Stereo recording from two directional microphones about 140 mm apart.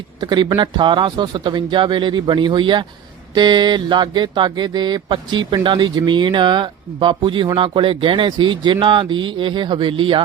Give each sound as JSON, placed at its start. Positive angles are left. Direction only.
{"t": 0.2, "sound": "speech", "side_deg": -30}